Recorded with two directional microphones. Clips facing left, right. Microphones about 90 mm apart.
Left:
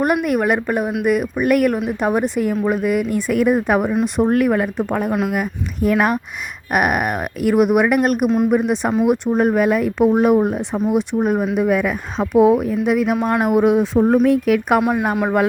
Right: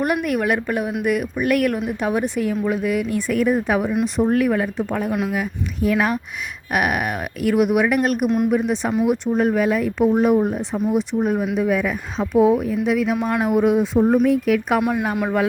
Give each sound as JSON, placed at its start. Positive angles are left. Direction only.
{"t": 0.3, "sound": "speech", "side_deg": 45}
{"t": 2.5, "sound": "speech", "side_deg": 50}
{"t": 5.9, "sound": "speech", "side_deg": 40}
{"t": 13.7, "sound": "speech", "side_deg": 90}
{"t": 14.3, "sound": "speech", "side_deg": 60}
{"t": 14.8, "sound": "a woman's voice", "side_deg": 25}